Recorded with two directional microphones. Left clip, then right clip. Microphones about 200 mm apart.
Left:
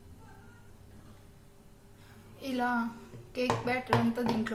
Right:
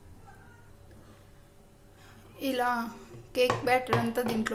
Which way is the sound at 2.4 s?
55° right (ahead or behind).